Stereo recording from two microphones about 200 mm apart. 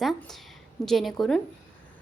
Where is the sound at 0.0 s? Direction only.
Centre (ahead or behind).